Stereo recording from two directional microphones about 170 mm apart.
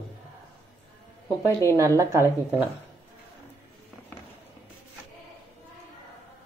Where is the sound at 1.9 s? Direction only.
15° right (ahead or behind).